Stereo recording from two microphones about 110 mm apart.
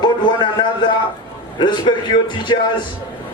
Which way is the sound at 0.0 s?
40° left (ahead or behind).